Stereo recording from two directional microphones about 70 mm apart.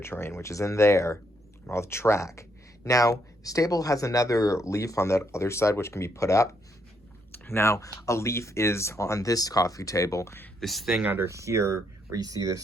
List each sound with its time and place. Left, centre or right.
0.0 s speech: left
7.3 s speech: left
10.6 s speech: centre
11.0 s speech: right
11.3 s speech: right
12.1 s speech: right